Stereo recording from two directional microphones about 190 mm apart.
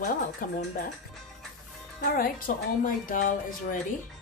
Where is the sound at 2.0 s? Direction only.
50° left (ahead or behind).